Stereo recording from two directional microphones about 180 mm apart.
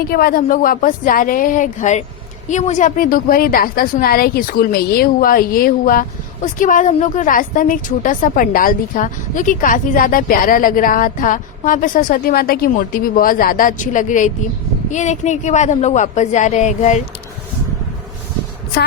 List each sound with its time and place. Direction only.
0.1 s a woman's voice: 55° left (ahead or behind); by 17.0 s 40° left (ahead or behind)